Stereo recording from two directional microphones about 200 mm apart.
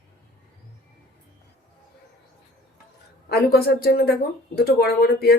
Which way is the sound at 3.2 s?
50° left (ahead or behind).